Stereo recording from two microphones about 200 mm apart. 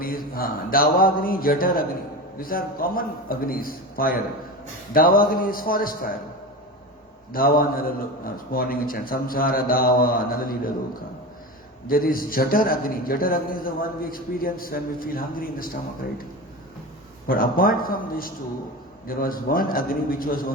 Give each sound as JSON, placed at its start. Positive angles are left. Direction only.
{"t": 0.0, "sound": "a man's voice", "side_deg": 45}
{"t": 7.3, "sound": "a man's voice", "side_deg": 45}
{"t": 11.9, "sound": "a man's voice", "side_deg": 45}
{"t": 17.2, "sound": "a man's voice", "side_deg": 45}